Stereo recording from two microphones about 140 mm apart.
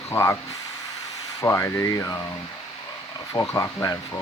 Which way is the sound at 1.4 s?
20° left (ahead or behind).